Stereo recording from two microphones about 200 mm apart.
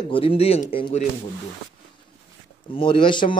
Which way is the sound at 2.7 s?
25° left (ahead or behind).